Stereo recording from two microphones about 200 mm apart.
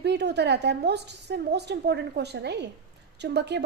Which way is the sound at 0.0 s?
55° right (ahead or behind).